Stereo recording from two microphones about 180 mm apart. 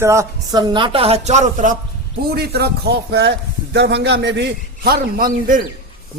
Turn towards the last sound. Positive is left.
turn(degrees=-55)  # may be behind; listen again after turning